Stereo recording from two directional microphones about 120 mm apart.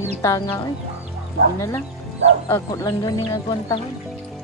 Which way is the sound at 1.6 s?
20° left (ahead or behind).